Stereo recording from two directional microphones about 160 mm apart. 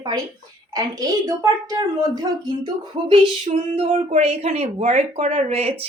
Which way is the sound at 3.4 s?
45° right (ahead or behind).